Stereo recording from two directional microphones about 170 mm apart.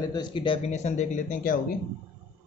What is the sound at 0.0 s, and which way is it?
Speech, 25° left (ahead or behind).